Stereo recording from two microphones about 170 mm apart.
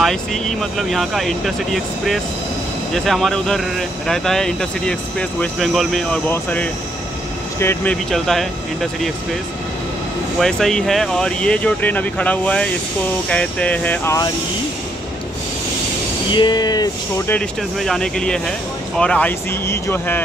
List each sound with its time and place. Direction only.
0.0 s speech: centre (ahead or behind)
10.4 s speech: centre (ahead or behind)
16.3 s speech: 25° left (ahead or behind)
17.3 s speech: 5° left (ahead or behind)